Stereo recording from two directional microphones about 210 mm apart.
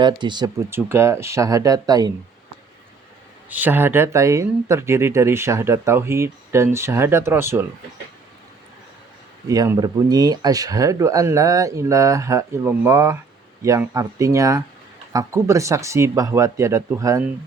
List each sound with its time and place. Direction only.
0.0 s speech: 20° right (ahead or behind)
3.5 s speech: 10° right (ahead or behind)
9.5 s speech: 15° right (ahead or behind)